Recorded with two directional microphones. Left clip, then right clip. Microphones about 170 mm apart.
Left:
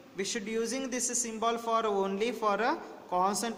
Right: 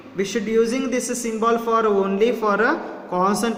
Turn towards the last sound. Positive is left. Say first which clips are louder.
# right 9 dB
turn(degrees=30)  # may be behind; listen again after turning